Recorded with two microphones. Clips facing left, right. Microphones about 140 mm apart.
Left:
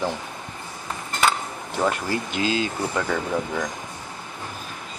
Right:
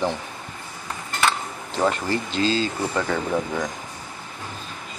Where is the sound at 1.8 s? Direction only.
10° left (ahead or behind).